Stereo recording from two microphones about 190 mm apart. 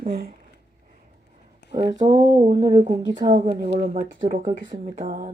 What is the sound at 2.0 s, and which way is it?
Speech, 20° right (ahead or behind).